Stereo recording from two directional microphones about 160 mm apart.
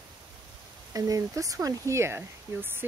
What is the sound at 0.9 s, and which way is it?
Speech, 20° right (ahead or behind).